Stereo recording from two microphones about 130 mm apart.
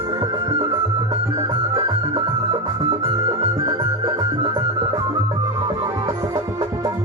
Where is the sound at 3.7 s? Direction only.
35° right (ahead or behind).